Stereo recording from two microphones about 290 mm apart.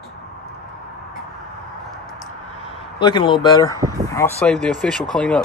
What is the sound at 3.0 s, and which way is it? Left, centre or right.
Speech, centre.